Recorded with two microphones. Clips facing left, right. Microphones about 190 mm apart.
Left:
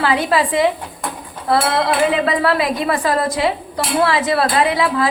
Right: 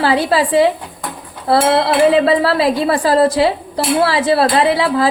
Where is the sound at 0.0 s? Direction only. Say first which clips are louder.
Right 2 dB; 30° right (ahead or behind).